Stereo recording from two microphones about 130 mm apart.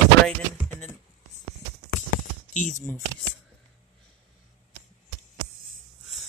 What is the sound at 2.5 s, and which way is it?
Speech, 70° left (ahead or behind).